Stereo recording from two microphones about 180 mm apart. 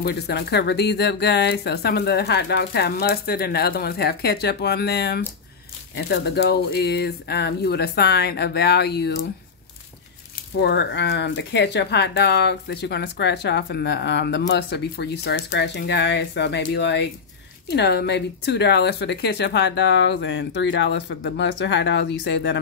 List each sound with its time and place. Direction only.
0.0 s speech: 65° left (ahead or behind)
10.6 s speech: 70° left (ahead or behind); by 22.6 s 90° left